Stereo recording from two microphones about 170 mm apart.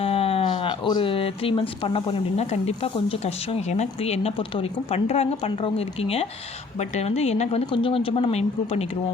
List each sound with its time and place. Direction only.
0.0 s speech: 35° left (ahead or behind)